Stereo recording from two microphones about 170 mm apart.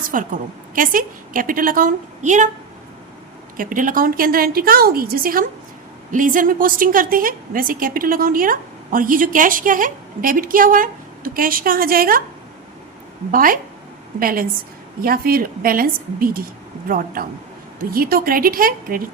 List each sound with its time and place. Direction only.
0.1 s a woman's voice: 50° right (ahead or behind)
3.6 s a woman's voice: 50° right (ahead or behind)
13.3 s a woman's voice: 55° right (ahead or behind)